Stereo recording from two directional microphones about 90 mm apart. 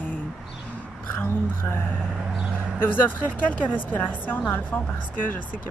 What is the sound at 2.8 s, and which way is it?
Speech, 25° left (ahead or behind).